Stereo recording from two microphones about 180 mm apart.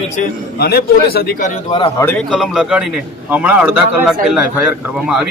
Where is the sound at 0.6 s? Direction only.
60° left (ahead or behind).